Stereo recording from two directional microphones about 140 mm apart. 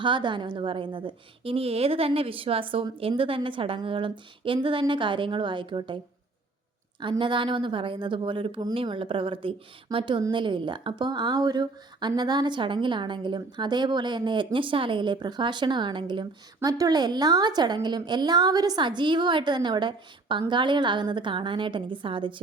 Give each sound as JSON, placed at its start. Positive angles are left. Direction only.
{"t": 0.0, "sound": "a woman's voice", "side_deg": -35}
{"t": 7.0, "sound": "a woman's voice", "side_deg": -35}